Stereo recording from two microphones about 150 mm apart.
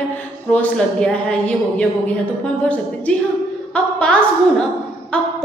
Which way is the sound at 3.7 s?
5° left (ahead or behind).